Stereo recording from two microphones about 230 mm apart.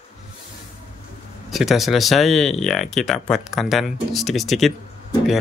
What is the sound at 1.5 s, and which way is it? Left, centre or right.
Speech, centre.